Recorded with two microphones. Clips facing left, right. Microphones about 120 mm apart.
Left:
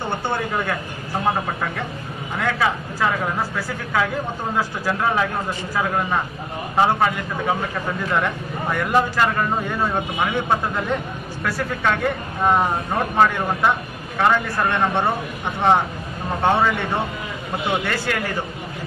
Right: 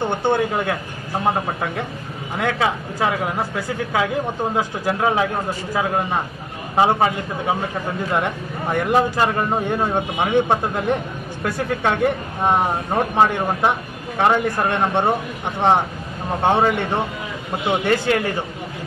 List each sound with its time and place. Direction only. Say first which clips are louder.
0.2 s a man's voice: right 5 dB; 20° right (ahead or behind)
2.3 s a man's voice: right 1 dB; 20° right (ahead or behind)